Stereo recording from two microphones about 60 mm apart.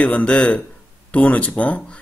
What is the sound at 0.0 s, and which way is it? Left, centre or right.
Speech, left.